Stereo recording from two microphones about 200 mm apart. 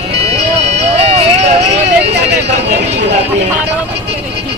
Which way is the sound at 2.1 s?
60° right (ahead or behind).